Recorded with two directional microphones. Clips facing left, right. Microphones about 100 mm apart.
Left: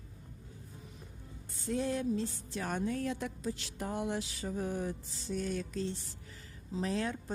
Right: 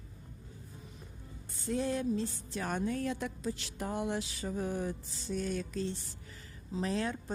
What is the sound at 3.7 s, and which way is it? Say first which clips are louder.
Music: right 1 dB; 90° right.